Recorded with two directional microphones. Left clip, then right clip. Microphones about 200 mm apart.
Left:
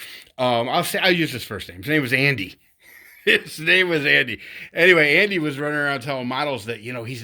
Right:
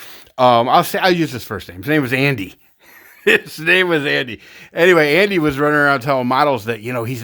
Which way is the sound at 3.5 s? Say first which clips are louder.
Right 4 dB; 30° right (ahead or behind).